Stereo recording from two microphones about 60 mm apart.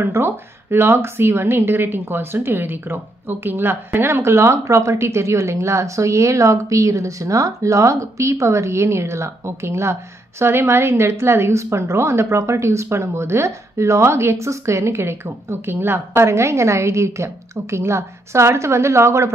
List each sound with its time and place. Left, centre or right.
0.0 s speech: right
16.3 s speech: right